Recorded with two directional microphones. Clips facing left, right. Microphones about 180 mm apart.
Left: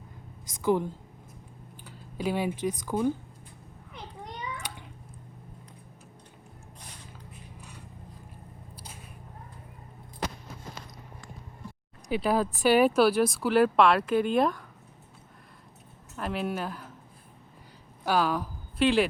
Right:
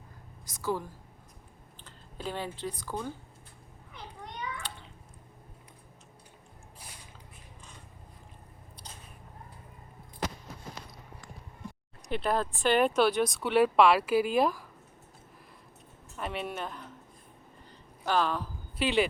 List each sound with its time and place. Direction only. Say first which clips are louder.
0.6 s a woman's voice: left 7 dB; 20° left (ahead or behind)
12.0 s speech: left 3 dB; 10° left (ahead or behind)
16.1 s speech: left 4 dB; centre (ahead or behind)
18.0 s speech: left 2 dB; 10° left (ahead or behind)
18.8 s speech: left 4 dB; centre (ahead or behind)